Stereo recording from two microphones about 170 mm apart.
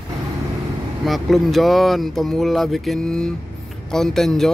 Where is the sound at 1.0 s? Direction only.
Centre (ahead or behind).